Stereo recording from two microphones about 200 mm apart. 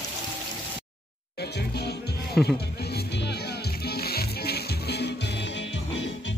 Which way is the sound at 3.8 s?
50° left (ahead or behind).